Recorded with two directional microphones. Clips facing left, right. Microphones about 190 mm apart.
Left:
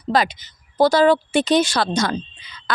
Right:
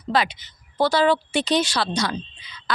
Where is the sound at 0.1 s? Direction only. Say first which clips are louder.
Left 3 dB; 40° left (ahead or behind).